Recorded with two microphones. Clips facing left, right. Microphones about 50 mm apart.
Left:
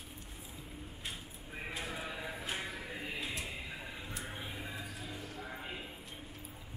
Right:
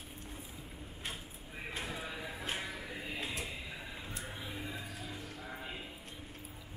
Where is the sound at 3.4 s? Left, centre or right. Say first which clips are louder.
Even; centre.